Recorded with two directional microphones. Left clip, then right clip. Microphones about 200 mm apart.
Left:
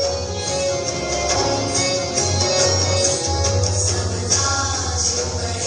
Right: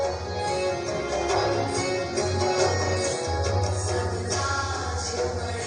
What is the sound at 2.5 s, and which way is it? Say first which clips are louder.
Music: left 7 dB; 50° right (ahead or behind).